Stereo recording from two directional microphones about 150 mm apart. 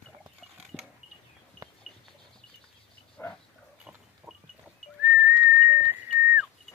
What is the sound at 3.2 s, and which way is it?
Pig, 10° left (ahead or behind).